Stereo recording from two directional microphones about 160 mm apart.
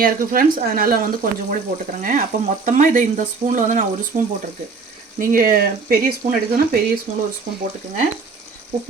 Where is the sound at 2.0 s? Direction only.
55° right (ahead or behind).